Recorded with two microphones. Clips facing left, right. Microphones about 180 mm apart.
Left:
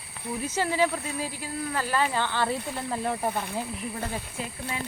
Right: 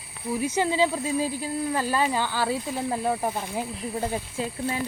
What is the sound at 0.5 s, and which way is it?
Speech, 20° right (ahead or behind).